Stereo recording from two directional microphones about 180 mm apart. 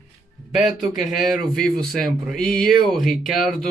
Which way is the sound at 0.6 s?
Centre (ahead or behind).